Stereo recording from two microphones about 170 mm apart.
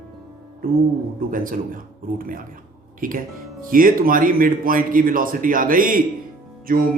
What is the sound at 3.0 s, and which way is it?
A man's voice, 55° right (ahead or behind).